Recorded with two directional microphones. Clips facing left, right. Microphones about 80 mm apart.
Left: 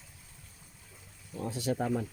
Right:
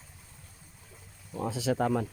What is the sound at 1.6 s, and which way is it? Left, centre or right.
Speech, right.